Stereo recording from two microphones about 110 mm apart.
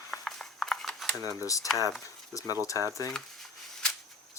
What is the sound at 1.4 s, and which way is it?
Speech, 30° left (ahead or behind).